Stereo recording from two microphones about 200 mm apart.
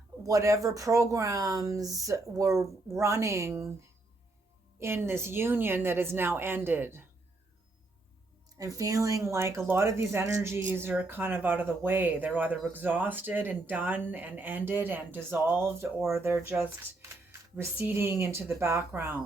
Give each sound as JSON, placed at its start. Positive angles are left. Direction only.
{"t": 0.2, "sound": "speech", "side_deg": -15}
{"t": 4.8, "sound": "speech", "side_deg": -10}
{"t": 8.5, "sound": "speech", "side_deg": -15}
{"t": 17.6, "sound": "speech", "side_deg": -10}